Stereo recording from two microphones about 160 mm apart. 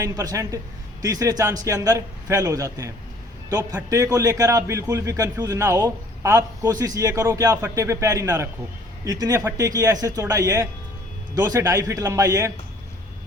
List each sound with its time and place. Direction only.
0.0 s a man's voice: 20° right (ahead or behind)